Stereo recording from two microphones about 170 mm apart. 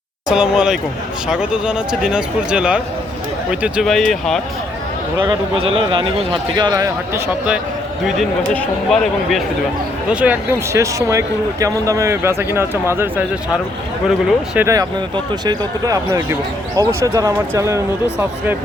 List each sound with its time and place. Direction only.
0.3 s speech: 5° right (ahead or behind)
5.2 s speech: 30° right (ahead or behind)
8.5 s speech: centre (ahead or behind); by 13.2 s 15° right (ahead or behind)
14.5 s speech: 15° right (ahead or behind)